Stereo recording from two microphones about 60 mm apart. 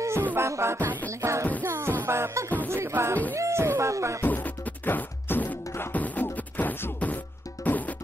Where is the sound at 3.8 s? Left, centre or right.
Right.